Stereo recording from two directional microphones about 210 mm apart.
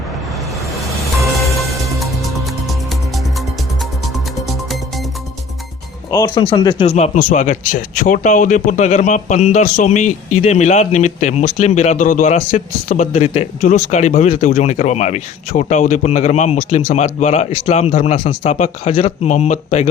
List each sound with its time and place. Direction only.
2.0 s music: centre (ahead or behind)
4.4 s music: centre (ahead or behind)
6.1 s speech: 15° left (ahead or behind)
6.8 s a man's voice: 30° left (ahead or behind)